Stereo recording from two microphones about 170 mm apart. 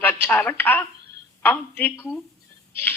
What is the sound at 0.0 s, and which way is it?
A woman's voice, 10° left (ahead or behind).